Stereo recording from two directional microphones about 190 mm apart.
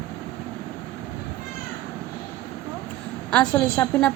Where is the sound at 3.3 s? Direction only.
5° left (ahead or behind).